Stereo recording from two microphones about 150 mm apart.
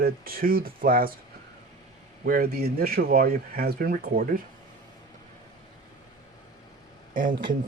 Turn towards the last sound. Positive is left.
turn(degrees=-65)  # may be behind; listen again after turning